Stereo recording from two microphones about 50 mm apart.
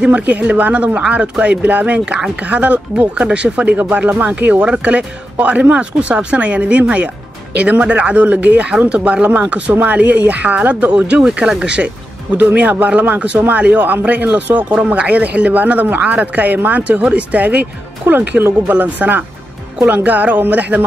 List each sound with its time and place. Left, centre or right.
0.0 s speech: right
12.5 s speech: right
14.7 s speech: right